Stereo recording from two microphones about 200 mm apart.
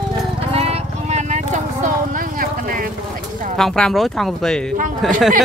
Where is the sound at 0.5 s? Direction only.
30° right (ahead or behind).